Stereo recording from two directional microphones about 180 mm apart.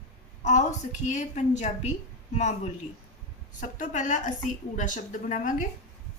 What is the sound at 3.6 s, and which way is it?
Speech, 45° left (ahead or behind).